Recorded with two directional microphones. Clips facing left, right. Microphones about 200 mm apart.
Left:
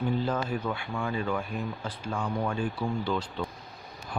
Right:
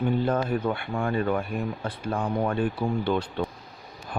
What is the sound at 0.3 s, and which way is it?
Speech, 55° right (ahead or behind).